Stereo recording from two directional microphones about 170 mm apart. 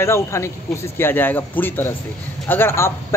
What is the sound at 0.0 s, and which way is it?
A man's voice, 15° left (ahead or behind).